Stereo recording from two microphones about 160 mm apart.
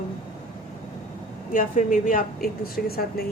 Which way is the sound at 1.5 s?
55° left (ahead or behind).